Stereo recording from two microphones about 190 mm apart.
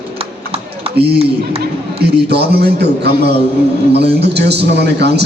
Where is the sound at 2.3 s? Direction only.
60° right (ahead or behind).